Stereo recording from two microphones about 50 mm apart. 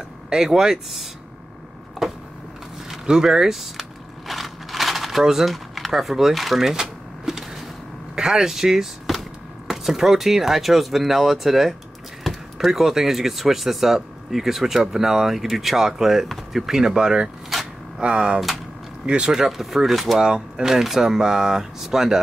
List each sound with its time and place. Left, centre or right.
0.3 s speech: centre
2.0 s power windows: centre
2.9 s speech: centre
4.3 s a sound: centre
8.2 s speech: centre
17.5 s a sound: centre
18.0 s speech: centre
19.4 s speech: centre
20.2 s speech: centre